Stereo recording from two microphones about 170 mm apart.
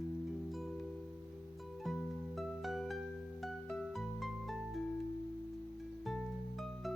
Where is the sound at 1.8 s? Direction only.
Centre (ahead or behind).